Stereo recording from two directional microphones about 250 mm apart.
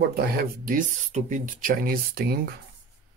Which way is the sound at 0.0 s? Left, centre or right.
Right.